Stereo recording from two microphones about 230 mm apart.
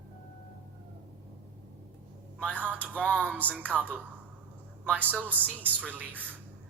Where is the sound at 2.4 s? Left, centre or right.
Centre.